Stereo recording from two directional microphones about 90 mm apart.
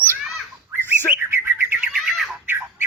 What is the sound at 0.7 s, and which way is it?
Bird, 25° right (ahead or behind).